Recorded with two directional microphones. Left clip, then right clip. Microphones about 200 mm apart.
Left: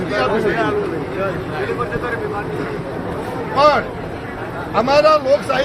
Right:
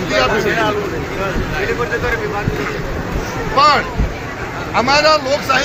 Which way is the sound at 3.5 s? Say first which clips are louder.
Right 2 dB; 40° left (ahead or behind).